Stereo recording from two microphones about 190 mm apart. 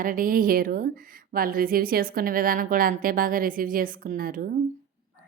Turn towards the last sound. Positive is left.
turn(degrees=-45)  # may be behind; listen again after turning